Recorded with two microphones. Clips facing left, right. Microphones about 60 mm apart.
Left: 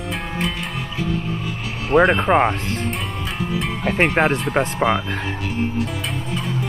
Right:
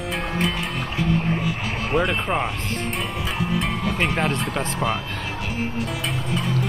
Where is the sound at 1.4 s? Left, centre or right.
Centre.